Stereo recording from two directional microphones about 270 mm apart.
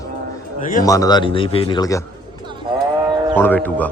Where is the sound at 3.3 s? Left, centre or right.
Centre.